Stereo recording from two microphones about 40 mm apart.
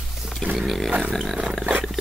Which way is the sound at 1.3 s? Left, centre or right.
Centre.